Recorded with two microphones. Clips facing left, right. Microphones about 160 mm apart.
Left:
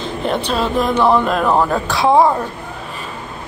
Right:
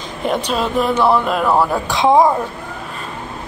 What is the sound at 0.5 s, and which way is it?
Speech, 10° right (ahead or behind).